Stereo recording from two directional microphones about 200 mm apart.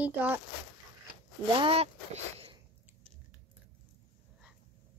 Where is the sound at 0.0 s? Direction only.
5° right (ahead or behind).